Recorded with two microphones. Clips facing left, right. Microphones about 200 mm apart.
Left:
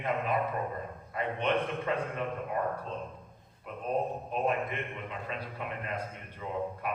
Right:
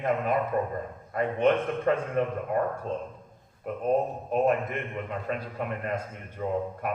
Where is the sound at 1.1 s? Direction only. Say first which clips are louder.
Right 6 dB; 45° right (ahead or behind).